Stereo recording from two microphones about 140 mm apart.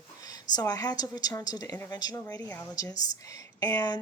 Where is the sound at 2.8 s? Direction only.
25° left (ahead or behind).